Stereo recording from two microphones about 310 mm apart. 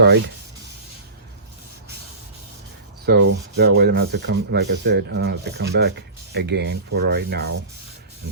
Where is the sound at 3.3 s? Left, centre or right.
Right.